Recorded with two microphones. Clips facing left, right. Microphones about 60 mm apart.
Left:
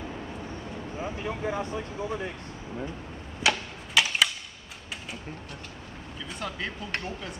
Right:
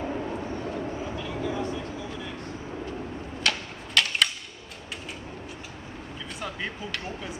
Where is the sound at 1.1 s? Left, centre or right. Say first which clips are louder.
Left 3 dB; left.